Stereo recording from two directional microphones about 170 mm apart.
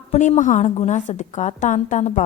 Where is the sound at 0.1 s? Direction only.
45° left (ahead or behind).